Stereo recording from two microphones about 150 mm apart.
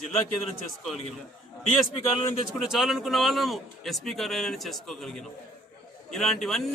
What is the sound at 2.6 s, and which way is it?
Speech, 5° right (ahead or behind).